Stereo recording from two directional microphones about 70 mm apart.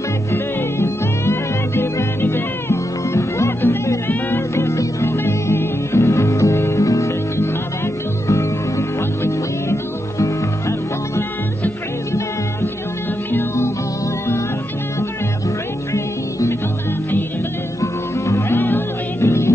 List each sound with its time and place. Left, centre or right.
0.3 s music: left
13.3 s music: left
15.9 s music: left
17.7 s music: left
18.5 s music: left